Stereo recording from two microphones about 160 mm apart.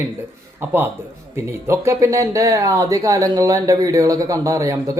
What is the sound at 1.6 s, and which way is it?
Speech, 15° right (ahead or behind).